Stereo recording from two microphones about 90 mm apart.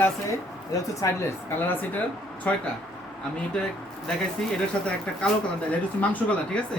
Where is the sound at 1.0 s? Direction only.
40° left (ahead or behind).